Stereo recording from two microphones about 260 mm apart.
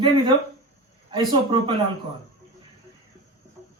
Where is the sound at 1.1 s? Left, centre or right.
Centre.